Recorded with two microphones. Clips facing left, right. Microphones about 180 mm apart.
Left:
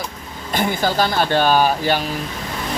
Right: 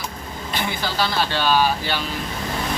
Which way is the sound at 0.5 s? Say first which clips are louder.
Left 7 dB; 45° left (ahead or behind).